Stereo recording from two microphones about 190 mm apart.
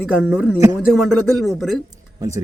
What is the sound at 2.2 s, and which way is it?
Speech, 15° right (ahead or behind).